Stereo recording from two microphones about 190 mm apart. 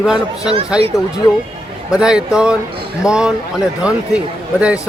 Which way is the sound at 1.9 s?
5° right (ahead or behind).